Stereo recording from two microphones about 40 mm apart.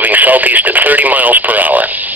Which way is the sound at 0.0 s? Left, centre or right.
Right.